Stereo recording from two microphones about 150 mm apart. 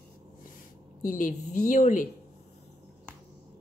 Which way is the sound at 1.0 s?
60° left (ahead or behind).